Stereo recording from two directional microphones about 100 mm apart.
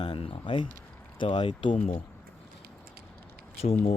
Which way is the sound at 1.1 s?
55° left (ahead or behind).